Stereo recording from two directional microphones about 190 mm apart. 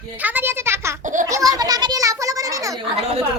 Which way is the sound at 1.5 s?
20° right (ahead or behind).